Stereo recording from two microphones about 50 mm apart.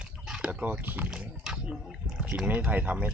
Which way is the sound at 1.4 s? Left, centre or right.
Centre.